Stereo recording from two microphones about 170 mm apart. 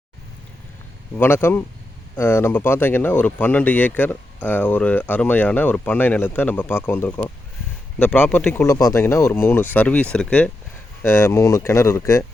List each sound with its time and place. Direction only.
1.1 s speech: 10° left (ahead or behind)